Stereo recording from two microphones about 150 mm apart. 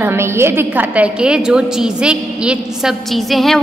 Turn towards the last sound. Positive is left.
turn(degrees=0)  # may be behind; listen again after turning